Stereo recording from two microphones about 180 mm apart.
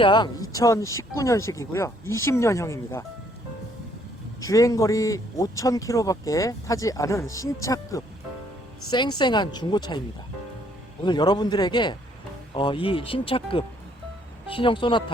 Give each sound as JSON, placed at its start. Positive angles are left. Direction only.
{"t": 0.0, "sound": "speech", "side_deg": 25}
{"t": 4.4, "sound": "a woman's voice", "side_deg": 20}
{"t": 11.0, "sound": "a woman's voice", "side_deg": 25}